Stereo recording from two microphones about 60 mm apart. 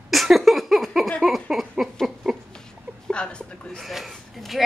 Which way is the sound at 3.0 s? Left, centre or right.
Centre.